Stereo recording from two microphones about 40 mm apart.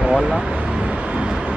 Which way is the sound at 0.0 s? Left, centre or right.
Right.